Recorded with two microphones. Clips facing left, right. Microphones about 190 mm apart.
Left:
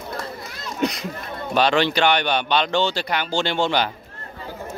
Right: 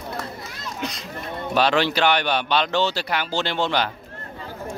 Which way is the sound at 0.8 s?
65° left (ahead or behind).